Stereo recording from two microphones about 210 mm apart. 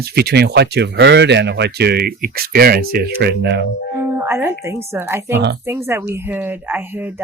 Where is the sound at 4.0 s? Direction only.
10° right (ahead or behind).